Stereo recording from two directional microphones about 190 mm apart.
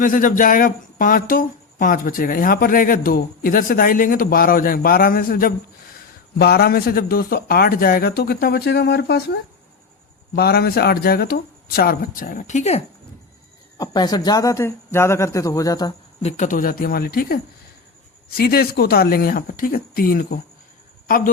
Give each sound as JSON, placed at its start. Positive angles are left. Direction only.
{"t": 0.0, "sound": "speech", "side_deg": 45}
{"t": 13.7, "sound": "speech", "side_deg": 20}
{"t": 16.2, "sound": "speech", "side_deg": 40}